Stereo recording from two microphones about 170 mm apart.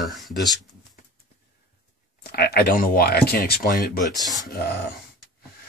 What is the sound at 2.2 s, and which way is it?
Speech, 70° left (ahead or behind).